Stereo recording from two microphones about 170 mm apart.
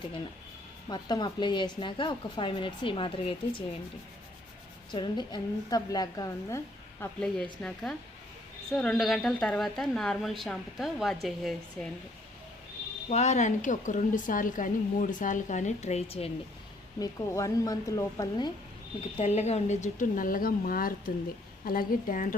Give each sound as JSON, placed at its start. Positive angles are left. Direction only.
{"t": 0.9, "sound": "speech", "side_deg": 25}
{"t": 4.9, "sound": "speech", "side_deg": 25}
{"t": 7.2, "sound": "a woman's voice", "side_deg": 5}
{"t": 13.1, "sound": "a woman's voice", "side_deg": 40}
{"t": 17.0, "sound": "speech", "side_deg": 20}
{"t": 19.1, "sound": "a woman's voice", "side_deg": 40}